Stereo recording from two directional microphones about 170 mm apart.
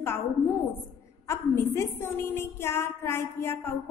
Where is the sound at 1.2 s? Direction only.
15° left (ahead or behind).